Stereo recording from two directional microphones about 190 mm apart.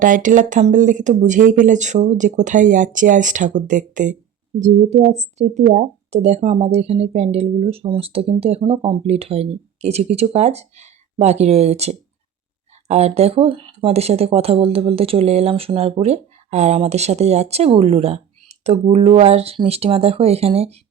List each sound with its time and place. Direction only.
0.0 s speech: 45° right (ahead or behind)